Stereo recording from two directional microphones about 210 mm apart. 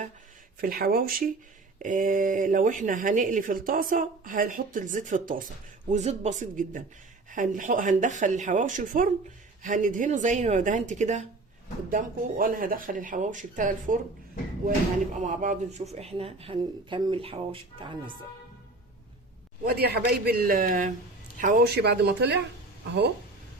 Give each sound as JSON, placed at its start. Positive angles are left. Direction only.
{"t": 0.6, "sound": "a man's voice", "side_deg": -45}
{"t": 15.3, "sound": "a woman's voice", "side_deg": -35}
{"t": 19.6, "sound": "a man's voice", "side_deg": -50}